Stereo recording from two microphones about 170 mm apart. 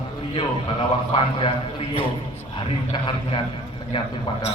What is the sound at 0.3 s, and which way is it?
A man's voice, 30° left (ahead or behind).